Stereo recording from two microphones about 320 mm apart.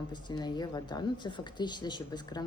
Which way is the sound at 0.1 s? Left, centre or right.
Centre.